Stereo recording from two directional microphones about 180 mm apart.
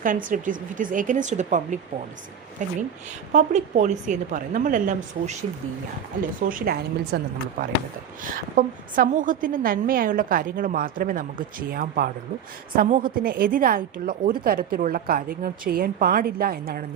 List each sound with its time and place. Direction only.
0.0 s a woman's voice: 50° right (ahead or behind)
6.5 s a woman's voice: 55° right (ahead or behind)
8.2 s a woman's voice: 50° right (ahead or behind)